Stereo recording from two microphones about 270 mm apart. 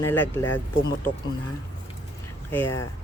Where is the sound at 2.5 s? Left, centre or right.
Centre.